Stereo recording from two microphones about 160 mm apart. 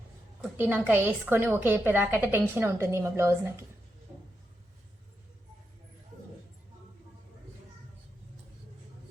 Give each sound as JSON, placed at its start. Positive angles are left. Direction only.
{"t": 0.5, "sound": "a woman's voice", "side_deg": -10}